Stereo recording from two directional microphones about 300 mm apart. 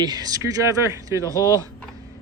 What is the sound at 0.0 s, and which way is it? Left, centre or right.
Cutlery, centre.